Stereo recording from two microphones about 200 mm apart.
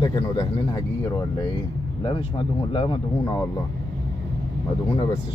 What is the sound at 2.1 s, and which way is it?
Speech, 25° left (ahead or behind).